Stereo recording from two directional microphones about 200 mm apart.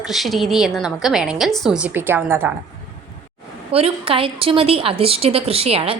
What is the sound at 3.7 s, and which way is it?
A woman's voice, 30° right (ahead or behind).